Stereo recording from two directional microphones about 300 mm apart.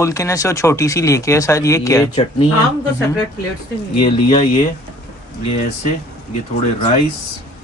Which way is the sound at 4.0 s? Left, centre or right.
Centre.